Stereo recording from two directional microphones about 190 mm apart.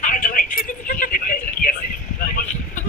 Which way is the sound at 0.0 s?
45° left (ahead or behind).